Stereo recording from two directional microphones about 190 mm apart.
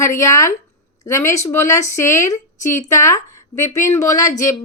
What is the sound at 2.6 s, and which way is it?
Speech, 40° left (ahead or behind).